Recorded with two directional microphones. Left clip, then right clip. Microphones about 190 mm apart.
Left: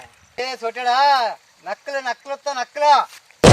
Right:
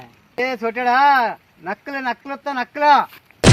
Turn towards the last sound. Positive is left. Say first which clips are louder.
# left 3 dB
turn(degrees=0)  # may be behind; listen again after turning